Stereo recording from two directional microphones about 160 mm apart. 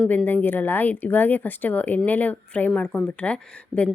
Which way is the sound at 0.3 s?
10° left (ahead or behind).